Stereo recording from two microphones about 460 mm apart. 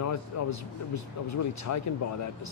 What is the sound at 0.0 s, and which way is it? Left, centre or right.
Speech, left.